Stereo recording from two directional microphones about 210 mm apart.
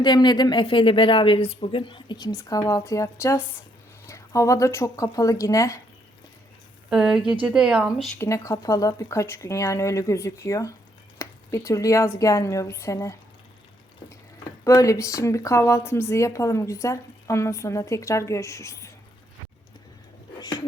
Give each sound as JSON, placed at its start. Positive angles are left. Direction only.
{"t": 0.0, "sound": "a woman's voice", "side_deg": 20}
{"t": 6.9, "sound": "speech", "side_deg": -5}
{"t": 8.2, "sound": "a woman's voice", "side_deg": 15}
{"t": 14.6, "sound": "a woman's voice", "side_deg": 15}